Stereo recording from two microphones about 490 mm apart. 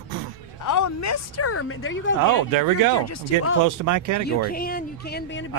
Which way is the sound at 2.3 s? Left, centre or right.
Right.